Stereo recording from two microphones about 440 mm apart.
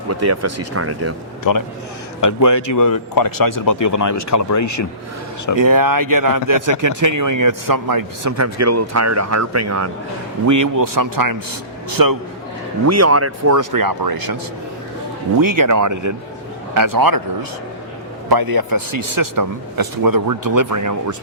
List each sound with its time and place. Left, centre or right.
0.1 s speech: right
1.5 s a man's voice: left
5.5 s a man's voice: right
12.8 s speech: right
15.4 s a man's voice: right
18.3 s a man's voice: right